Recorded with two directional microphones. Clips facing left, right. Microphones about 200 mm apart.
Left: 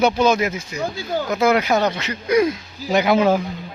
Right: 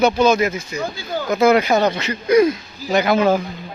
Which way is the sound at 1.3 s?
Centre (ahead or behind).